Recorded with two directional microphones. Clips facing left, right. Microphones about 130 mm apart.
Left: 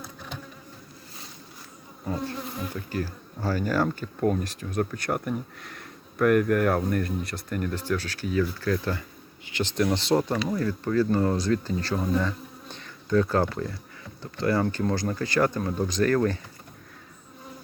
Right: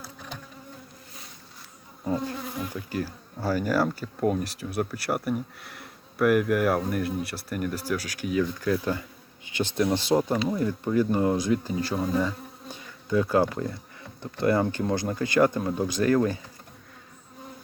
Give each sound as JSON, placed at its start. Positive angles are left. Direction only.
{"t": 2.7, "sound": "speech", "side_deg": -10}
{"t": 10.3, "sound": "speech", "side_deg": -20}